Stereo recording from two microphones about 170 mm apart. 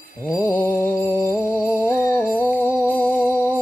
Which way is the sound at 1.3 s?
10° left (ahead or behind).